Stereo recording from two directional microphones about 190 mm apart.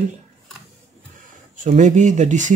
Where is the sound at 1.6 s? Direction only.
40° right (ahead or behind).